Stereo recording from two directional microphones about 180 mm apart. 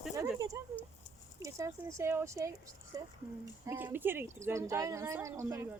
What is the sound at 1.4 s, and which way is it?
Speech, 15° right (ahead or behind).